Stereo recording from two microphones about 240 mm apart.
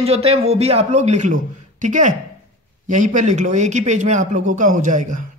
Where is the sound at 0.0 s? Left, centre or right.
Right.